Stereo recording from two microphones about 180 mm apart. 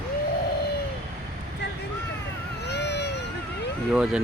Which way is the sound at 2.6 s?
70° left (ahead or behind).